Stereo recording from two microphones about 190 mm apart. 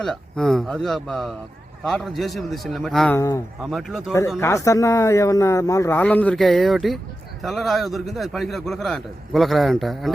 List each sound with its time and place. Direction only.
0.0 s a man's voice: centre (ahead or behind)
3.2 s speech: 15° left (ahead or behind)
3.6 s a man's voice: centre (ahead or behind)
4.4 s a man's voice: 15° left (ahead or behind)